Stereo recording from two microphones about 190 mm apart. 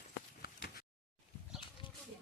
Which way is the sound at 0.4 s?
55° left (ahead or behind).